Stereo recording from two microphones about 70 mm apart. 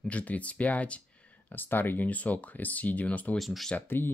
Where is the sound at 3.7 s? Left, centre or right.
Left.